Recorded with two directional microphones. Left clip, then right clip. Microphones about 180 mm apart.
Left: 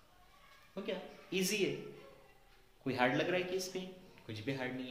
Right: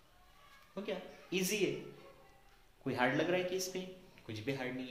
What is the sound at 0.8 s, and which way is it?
Speech, 20° right (ahead or behind).